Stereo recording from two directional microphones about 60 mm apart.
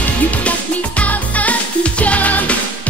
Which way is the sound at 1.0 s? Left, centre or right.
Left.